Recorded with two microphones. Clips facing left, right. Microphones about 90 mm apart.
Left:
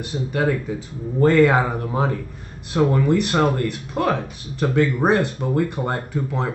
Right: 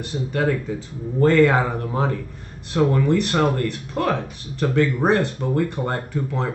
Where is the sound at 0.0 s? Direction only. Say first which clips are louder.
Left 1 dB; 15° left (ahead or behind).